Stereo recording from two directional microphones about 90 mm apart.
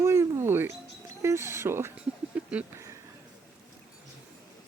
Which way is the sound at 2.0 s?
15° right (ahead or behind).